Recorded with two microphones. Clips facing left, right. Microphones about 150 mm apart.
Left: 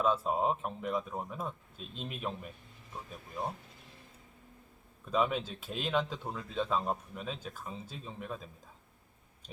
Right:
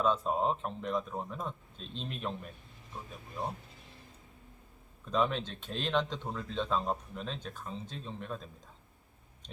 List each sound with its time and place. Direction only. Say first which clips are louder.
0.0 s speech: even; 5° left (ahead or behind)
5.0 s speech: even; 5° left (ahead or behind)